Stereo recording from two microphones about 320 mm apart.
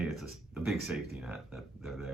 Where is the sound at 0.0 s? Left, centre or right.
Centre.